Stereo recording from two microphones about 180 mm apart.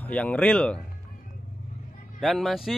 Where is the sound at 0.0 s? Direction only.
5° left (ahead or behind).